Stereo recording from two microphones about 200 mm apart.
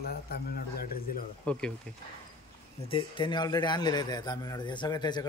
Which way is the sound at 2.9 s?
25° left (ahead or behind).